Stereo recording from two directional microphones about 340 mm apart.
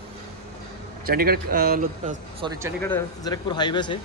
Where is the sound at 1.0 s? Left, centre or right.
Right.